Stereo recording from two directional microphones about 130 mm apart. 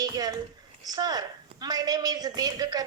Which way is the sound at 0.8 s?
30° right (ahead or behind).